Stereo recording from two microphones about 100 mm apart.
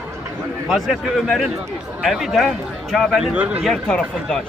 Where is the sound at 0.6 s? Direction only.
Centre (ahead or behind).